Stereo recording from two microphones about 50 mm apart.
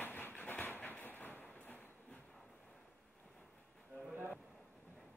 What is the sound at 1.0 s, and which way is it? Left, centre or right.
Vehicle, left.